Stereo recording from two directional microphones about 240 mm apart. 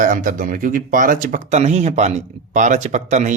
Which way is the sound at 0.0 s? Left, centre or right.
Right.